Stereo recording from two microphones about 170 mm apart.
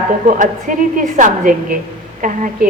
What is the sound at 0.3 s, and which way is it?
A woman's voice, 50° right (ahead or behind).